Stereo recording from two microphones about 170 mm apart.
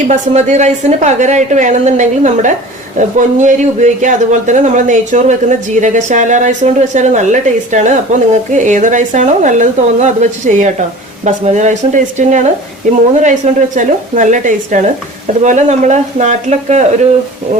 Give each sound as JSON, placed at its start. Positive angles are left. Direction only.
{"t": 0.1, "sound": "a man's voice", "side_deg": -45}